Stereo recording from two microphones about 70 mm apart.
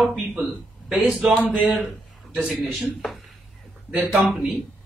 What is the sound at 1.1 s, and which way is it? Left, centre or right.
A man's voice, centre.